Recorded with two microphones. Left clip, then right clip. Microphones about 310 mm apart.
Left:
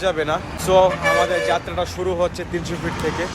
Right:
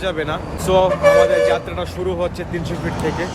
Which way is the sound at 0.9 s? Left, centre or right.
Right.